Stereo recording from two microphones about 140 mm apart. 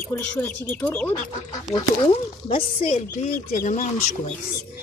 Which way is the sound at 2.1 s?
45° left (ahead or behind).